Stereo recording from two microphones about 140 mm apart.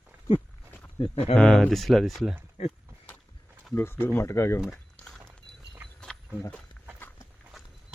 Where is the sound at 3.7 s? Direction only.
15° left (ahead or behind).